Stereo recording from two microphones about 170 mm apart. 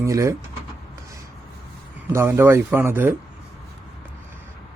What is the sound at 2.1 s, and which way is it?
Speech, 15° right (ahead or behind).